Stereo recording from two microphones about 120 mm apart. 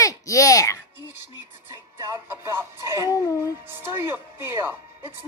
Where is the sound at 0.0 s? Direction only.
30° left (ahead or behind).